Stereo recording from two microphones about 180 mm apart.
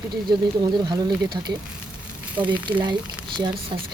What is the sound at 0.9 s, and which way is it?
Speech, 25° right (ahead or behind).